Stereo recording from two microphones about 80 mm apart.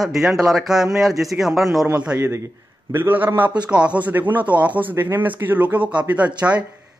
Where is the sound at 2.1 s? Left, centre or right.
Right.